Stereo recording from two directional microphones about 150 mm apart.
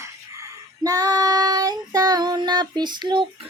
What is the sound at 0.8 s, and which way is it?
Child singing, 25° right (ahead or behind).